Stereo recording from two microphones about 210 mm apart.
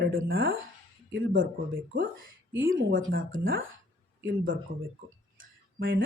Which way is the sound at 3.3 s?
65° right (ahead or behind).